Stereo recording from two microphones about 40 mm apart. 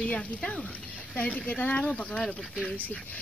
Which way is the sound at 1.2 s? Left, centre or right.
Left.